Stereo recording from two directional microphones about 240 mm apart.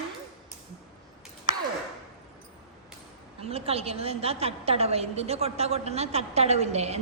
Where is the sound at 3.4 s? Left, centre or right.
Right.